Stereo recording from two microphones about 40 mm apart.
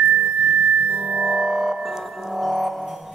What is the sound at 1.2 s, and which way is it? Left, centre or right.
Music, centre.